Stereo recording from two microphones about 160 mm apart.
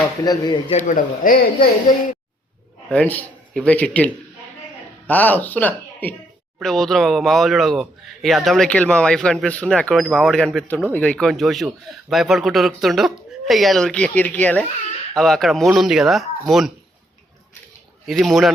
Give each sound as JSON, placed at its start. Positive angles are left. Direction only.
{"t": 0.3, "sound": "speech", "side_deg": 25}
{"t": 0.7, "sound": "a man's voice", "side_deg": 50}
{"t": 2.9, "sound": "a man's voice", "side_deg": 10}
{"t": 18.0, "sound": "speech", "side_deg": 0}